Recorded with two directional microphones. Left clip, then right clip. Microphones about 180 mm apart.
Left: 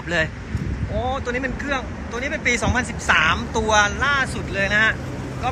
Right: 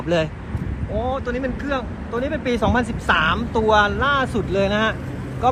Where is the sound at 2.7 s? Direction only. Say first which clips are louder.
Even; 20° left (ahead or behind).